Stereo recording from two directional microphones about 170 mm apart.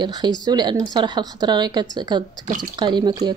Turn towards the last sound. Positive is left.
turn(degrees=-25)  # may be behind; listen again after turning